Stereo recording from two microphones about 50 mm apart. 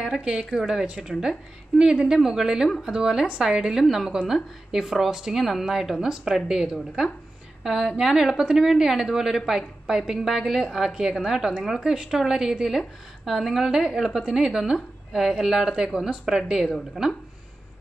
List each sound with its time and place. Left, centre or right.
0.2 s a woman's voice: right
0.5 s a woman's voice: centre
16.6 s speech: centre